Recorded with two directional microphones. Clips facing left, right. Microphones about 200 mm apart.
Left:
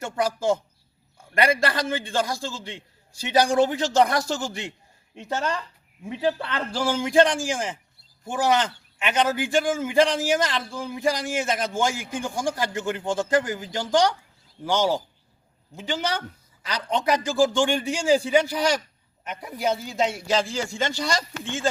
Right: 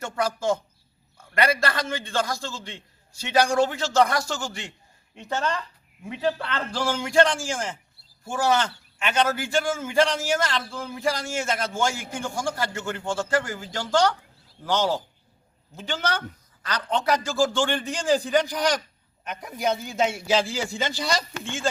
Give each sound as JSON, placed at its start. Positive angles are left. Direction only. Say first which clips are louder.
{"t": 0.0, "sound": "a man's voice", "louder": "left 2 dB", "side_deg": 15}
{"t": 1.6, "sound": "a man's voice", "louder": "left 2 dB", "side_deg": 15}